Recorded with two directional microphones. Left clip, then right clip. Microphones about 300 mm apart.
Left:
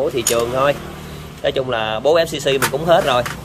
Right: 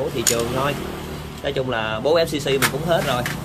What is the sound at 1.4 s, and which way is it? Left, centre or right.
Speech, centre.